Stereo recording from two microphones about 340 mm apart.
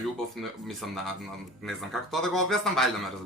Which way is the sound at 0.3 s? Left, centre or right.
Centre.